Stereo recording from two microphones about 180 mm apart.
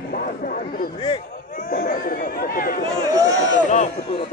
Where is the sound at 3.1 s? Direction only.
20° right (ahead or behind).